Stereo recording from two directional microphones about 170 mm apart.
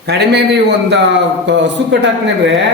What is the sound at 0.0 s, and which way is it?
A man's voice, 85° right.